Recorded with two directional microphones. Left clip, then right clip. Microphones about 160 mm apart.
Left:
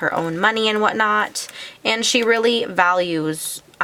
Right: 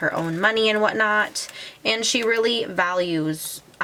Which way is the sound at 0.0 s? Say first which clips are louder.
Left 3 dB; 20° left (ahead or behind).